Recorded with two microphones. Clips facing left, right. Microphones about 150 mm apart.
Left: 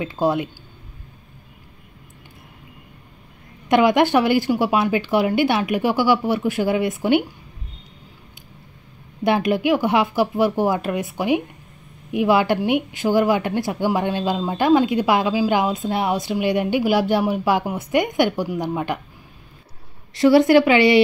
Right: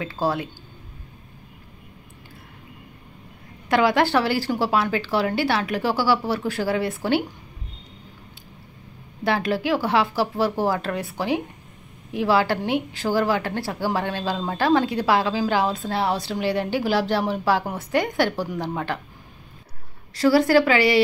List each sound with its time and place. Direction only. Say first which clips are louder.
0.0 s a woman's voice: left 4 dB; 20° left (ahead or behind)
3.6 s speech: left 4 dB; 20° left (ahead or behind)
9.2 s speech: left 4 dB; 15° left (ahead or behind)
20.2 s a woman's voice: left 4 dB; 20° left (ahead or behind)